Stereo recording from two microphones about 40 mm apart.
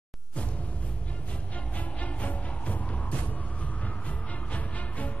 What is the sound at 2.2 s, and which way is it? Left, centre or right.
Music, left.